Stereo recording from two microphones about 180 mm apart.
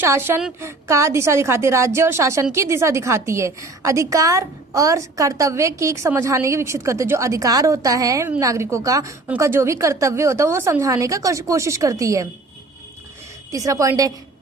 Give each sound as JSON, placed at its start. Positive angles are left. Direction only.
{"t": 0.0, "sound": "a woman's voice", "side_deg": -10}
{"t": 13.5, "sound": "a woman's voice", "side_deg": -20}